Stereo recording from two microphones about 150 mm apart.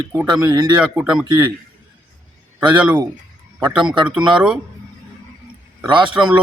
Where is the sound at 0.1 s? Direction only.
15° right (ahead or behind).